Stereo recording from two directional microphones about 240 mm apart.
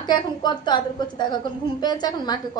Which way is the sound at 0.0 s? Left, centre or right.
Centre.